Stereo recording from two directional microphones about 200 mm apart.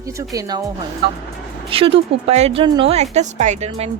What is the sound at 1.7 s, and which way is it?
A woman's voice, 30° right (ahead or behind).